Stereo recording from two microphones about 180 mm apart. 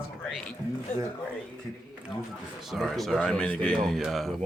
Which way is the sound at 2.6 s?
Centre (ahead or behind).